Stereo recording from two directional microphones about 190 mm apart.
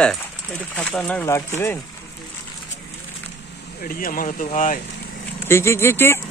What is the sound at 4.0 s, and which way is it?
Speech, 45° left (ahead or behind).